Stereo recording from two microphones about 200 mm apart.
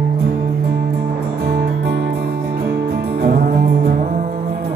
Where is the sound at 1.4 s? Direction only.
50° right (ahead or behind).